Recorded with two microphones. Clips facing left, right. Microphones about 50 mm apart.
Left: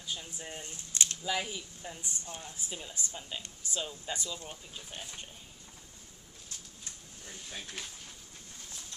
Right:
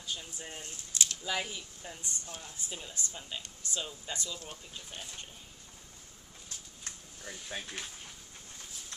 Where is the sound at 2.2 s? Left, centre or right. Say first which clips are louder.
Left 2 dB; left.